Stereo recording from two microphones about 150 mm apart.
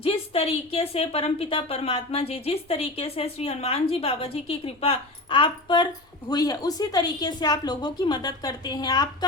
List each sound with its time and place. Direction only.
0.0 s a woman's voice: 40° left (ahead or behind)